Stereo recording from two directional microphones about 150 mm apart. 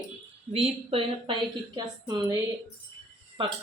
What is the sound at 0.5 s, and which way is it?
Speech, 40° right (ahead or behind).